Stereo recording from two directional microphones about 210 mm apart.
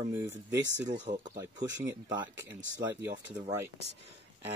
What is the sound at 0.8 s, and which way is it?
Speech, 35° right (ahead or behind).